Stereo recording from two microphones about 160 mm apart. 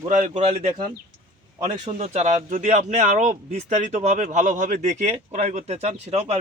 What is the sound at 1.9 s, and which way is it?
Speech, 45° right (ahead or behind).